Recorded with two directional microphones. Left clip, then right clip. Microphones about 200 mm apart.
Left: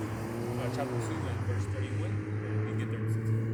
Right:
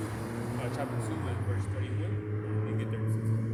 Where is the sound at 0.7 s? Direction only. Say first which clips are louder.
Left 1 dB; 5° left (ahead or behind).